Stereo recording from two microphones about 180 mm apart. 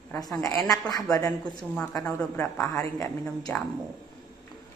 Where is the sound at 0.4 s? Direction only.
20° left (ahead or behind).